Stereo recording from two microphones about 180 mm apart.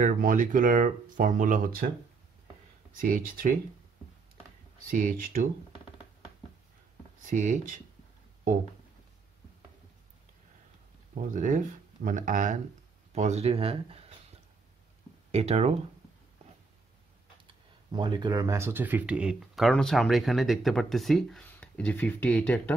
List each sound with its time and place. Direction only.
0.0 s speech: 45° right (ahead or behind)
2.9 s speech: 50° right (ahead or behind)
4.8 s speech: 50° right (ahead or behind)
7.2 s speech: 45° right (ahead or behind)
11.2 s speech: 45° right (ahead or behind)
15.3 s speech: 35° right (ahead or behind)
17.9 s speech: 25° right (ahead or behind); by 22.8 s 5° left (ahead or behind)